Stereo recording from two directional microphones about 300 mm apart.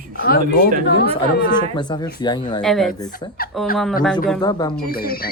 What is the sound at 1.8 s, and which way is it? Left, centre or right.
Speech, centre.